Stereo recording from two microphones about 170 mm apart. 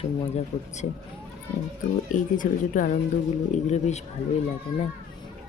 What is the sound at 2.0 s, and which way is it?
Speech, 50° left (ahead or behind).